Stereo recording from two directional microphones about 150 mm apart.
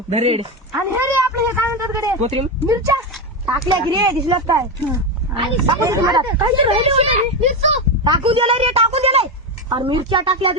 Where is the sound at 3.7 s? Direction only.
25° right (ahead or behind).